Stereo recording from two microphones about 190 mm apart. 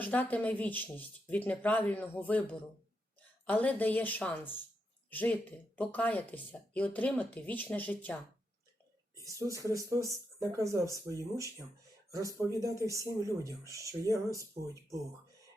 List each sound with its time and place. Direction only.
0.0 s speech: 10° left (ahead or behind)
9.1 s speech: 15° right (ahead or behind)
12.6 s speech: 15° right (ahead or behind)